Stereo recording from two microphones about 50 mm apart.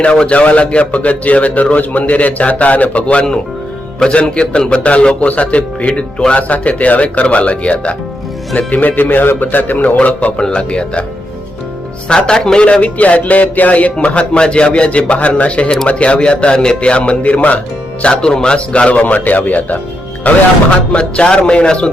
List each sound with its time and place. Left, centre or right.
0.0 s speech: left
12.0 s speech: centre
12.7 s speech: left
18.0 s speech: centre; by 20.4 s left
20.9 s speech: centre